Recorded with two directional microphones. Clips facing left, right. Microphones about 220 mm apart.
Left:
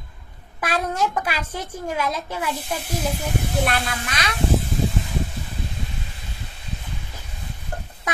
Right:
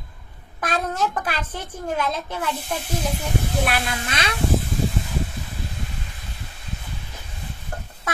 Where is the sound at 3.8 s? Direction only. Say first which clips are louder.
Right 1 dB; 25° right (ahead or behind).